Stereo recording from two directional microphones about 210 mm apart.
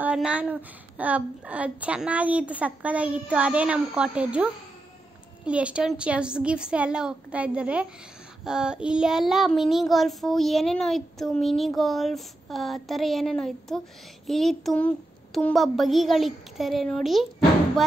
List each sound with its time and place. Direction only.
0.0 s a woman's voice: 5° right (ahead or behind)
5.4 s child singing: 5° right (ahead or behind)